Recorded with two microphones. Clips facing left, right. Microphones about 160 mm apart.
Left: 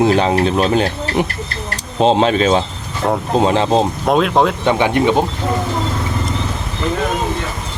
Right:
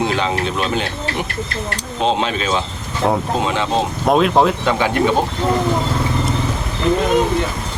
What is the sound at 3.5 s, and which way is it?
Speech, 35° left (ahead or behind).